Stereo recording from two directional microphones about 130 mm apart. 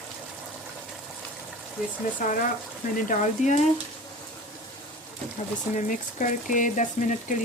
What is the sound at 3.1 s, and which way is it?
Speech, 70° left (ahead or behind).